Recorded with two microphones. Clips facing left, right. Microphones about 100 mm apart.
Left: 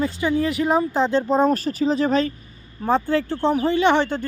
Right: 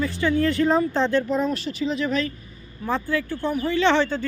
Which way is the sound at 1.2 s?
35° left (ahead or behind).